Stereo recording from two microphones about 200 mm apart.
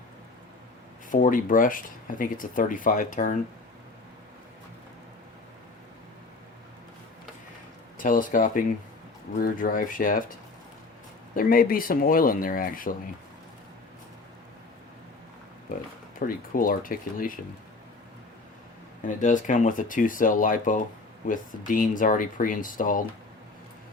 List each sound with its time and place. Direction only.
1.1 s speech: 40° left (ahead or behind)
7.9 s speech: 40° left (ahead or behind)
11.3 s speech: 45° left (ahead or behind)
16.1 s speech: 45° left (ahead or behind)
19.0 s speech: 40° left (ahead or behind)